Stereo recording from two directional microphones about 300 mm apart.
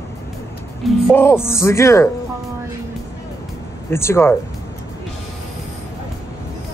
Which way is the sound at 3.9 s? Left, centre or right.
Centre.